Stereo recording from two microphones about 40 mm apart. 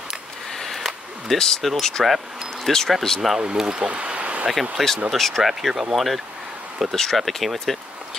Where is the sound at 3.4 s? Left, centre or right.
Right.